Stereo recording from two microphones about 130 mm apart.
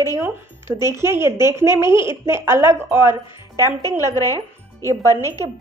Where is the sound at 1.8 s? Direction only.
20° right (ahead or behind).